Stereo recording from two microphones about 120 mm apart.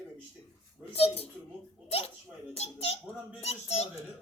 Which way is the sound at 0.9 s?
55° left (ahead or behind).